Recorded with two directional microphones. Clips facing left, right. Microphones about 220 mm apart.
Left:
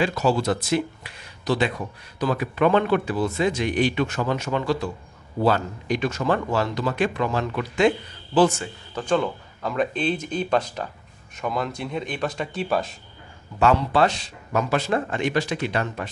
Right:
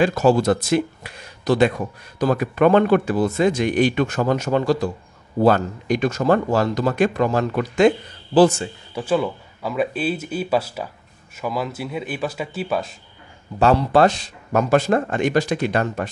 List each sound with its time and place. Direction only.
0.0 s speech: 50° right (ahead or behind)
8.4 s a man's voice: 30° right (ahead or behind)
8.9 s speech: 5° right (ahead or behind)
13.6 s speech: 40° right (ahead or behind)